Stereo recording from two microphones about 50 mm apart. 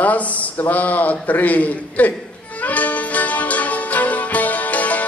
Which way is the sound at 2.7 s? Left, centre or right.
Left.